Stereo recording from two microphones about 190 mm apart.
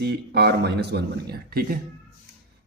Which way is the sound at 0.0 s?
60° right (ahead or behind).